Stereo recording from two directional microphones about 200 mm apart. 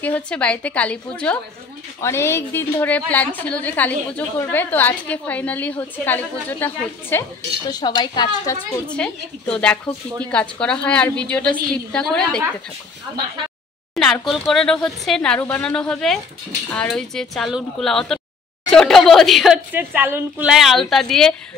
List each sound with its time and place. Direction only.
0.0 s a woman's voice: 5° left (ahead or behind)
7.7 s a woman's voice: 20° left (ahead or behind)
8.9 s a woman's voice: 5° left (ahead or behind)
13.9 s a woman's voice: centre (ahead or behind)